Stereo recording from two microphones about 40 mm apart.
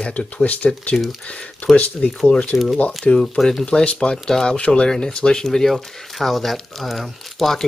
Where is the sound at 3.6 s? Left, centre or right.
Left.